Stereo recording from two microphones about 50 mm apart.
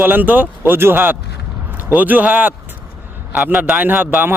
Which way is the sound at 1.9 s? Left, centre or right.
Right.